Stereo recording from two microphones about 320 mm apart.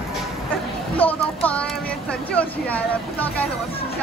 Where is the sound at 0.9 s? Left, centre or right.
Centre.